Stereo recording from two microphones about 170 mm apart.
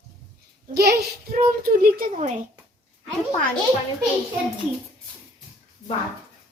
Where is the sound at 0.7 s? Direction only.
65° right (ahead or behind).